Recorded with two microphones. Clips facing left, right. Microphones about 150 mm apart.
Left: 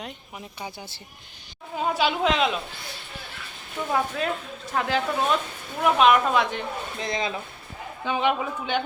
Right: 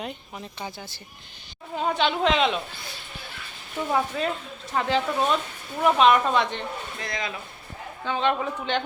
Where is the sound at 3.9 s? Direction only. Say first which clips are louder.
Even; centre (ahead or behind).